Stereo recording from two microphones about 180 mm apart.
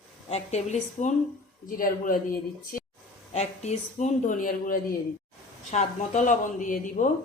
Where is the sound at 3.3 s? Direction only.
40° left (ahead or behind).